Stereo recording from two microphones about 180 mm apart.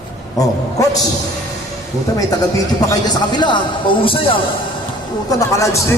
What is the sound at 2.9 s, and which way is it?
Speech, 25° left (ahead or behind).